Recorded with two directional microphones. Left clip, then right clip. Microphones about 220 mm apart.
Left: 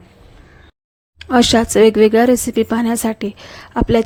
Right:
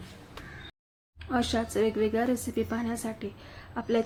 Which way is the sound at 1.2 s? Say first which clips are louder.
Left 16 dB; 45° left (ahead or behind).